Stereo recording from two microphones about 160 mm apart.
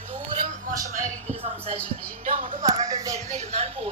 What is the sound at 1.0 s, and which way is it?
Speech, 45° right (ahead or behind).